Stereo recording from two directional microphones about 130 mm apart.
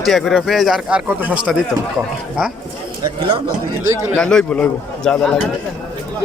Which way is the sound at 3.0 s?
35° right (ahead or behind).